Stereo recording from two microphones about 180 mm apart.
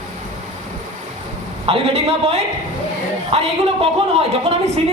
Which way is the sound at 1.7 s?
35° right (ahead or behind).